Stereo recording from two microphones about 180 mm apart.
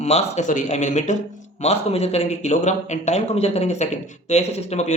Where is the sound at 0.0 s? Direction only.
40° left (ahead or behind).